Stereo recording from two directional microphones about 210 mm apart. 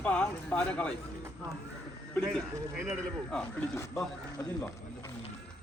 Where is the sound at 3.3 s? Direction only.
10° left (ahead or behind).